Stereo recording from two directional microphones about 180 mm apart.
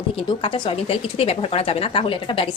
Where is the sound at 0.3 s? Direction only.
25° left (ahead or behind).